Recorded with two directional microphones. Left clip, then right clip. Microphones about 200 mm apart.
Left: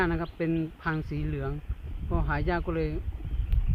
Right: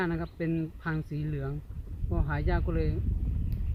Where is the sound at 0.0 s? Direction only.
5° right (ahead or behind).